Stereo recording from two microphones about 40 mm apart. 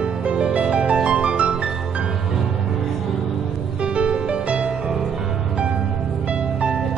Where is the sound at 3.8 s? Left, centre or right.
Right.